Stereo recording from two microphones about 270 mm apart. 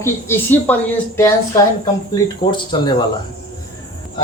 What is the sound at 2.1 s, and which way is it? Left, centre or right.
Speech, centre.